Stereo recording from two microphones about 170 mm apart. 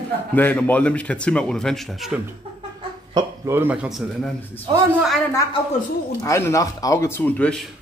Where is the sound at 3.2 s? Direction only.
15° right (ahead or behind).